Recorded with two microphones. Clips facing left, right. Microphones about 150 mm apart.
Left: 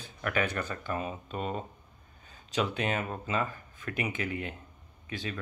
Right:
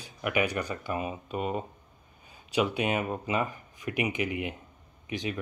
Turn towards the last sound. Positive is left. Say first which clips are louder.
# right 4 dB
turn(degrees=-15)  # may be behind; listen again after turning